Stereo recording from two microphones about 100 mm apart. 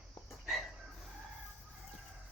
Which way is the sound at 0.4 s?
Centre (ahead or behind).